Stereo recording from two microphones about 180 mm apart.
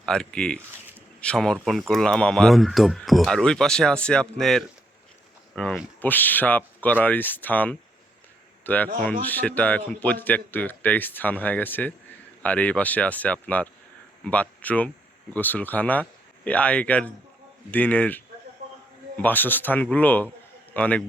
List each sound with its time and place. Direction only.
0.0 s speech: 5° left (ahead or behind)